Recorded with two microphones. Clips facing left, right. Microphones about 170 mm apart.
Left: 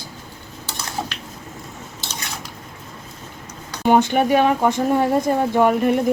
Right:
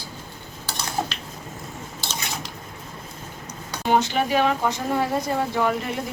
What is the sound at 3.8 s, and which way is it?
Speech, 55° left (ahead or behind).